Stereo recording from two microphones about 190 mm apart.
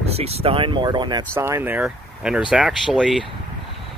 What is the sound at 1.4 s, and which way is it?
Speech, 15° right (ahead or behind).